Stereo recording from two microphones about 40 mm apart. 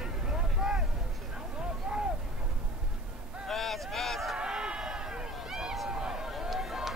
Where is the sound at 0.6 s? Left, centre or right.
Centre.